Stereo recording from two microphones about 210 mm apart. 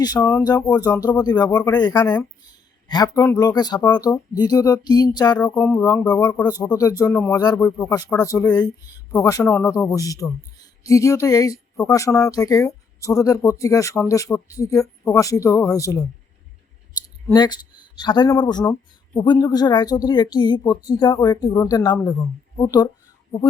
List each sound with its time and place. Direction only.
0.0 s speech: 15° left (ahead or behind)
17.3 s speech: 20° left (ahead or behind)